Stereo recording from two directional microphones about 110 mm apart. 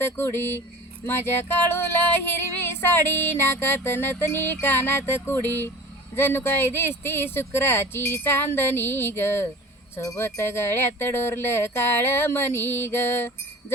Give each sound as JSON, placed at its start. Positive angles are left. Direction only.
{"t": 0.0, "sound": "music", "side_deg": 20}